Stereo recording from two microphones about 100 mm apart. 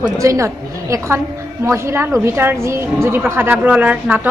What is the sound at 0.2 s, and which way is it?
A woman's voice, 30° right (ahead or behind).